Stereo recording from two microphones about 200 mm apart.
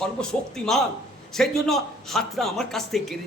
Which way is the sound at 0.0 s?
5° left (ahead or behind).